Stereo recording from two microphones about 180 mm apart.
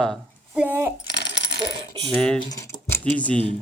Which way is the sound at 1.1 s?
70° left (ahead or behind).